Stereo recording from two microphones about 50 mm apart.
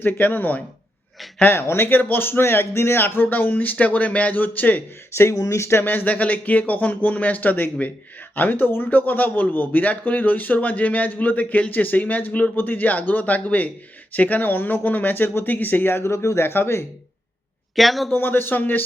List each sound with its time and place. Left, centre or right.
0.0 s speech: left
1.4 s speech: left
1.9 s speech: left
5.1 s speech: left
5.8 s speech: left
6.1 s speech: left
16.1 s speech: left
16.4 s speech: left
17.7 s speech: centre
18.1 s speech: left